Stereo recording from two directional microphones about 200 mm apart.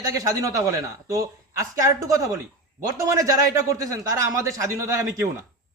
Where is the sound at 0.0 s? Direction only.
15° right (ahead or behind).